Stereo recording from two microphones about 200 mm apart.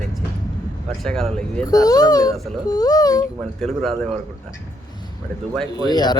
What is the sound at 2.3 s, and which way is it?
Music, centre (ahead or behind).